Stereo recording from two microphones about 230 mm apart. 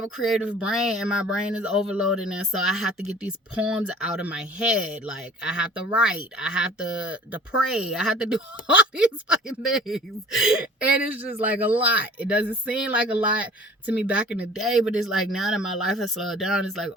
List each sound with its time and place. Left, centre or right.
0.3 s speech: centre
15.8 s speech: left
16.2 s speech: centre